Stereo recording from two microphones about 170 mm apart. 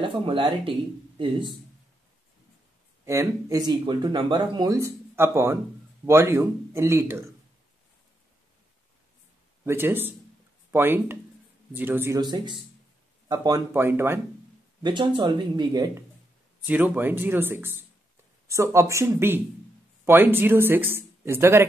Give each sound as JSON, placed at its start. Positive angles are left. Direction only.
{"t": 0.0, "sound": "speech", "side_deg": -30}
{"t": 3.1, "sound": "speech", "side_deg": -20}
{"t": 9.7, "sound": "speech", "side_deg": -15}
{"t": 12.2, "sound": "speech", "side_deg": -25}
{"t": 14.8, "sound": "speech", "side_deg": -25}
{"t": 16.6, "sound": "speech", "side_deg": -10}